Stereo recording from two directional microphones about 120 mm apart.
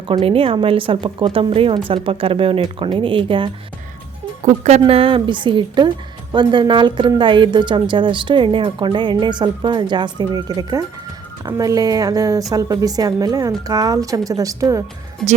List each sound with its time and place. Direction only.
0.1 s a woman's voice: 50° right (ahead or behind)
4.4 s speech: 65° right (ahead or behind)
4.9 s a woman's voice: 50° right (ahead or behind); by 14.8 s 25° right (ahead or behind)
15.2 s speech: 5° left (ahead or behind)